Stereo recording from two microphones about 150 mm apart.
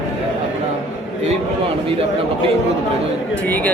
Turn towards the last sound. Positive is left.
turn(degrees=10)  # may be behind; listen again after turning